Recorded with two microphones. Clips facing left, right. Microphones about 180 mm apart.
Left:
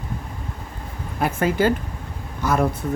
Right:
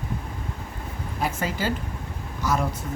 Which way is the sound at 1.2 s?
55° left (ahead or behind).